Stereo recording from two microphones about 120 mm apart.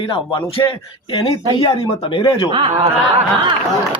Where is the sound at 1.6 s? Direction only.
45° left (ahead or behind).